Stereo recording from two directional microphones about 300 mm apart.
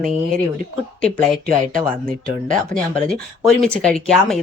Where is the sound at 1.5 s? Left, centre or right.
Right.